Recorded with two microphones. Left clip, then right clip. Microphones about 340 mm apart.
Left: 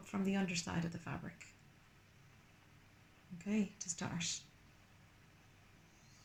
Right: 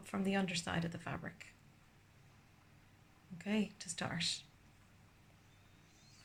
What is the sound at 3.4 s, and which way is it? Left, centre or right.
Speech, right.